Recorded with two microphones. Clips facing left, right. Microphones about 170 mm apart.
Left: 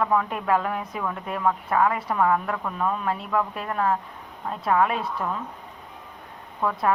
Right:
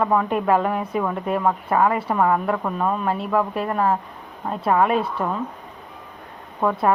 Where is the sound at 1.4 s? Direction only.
30° right (ahead or behind).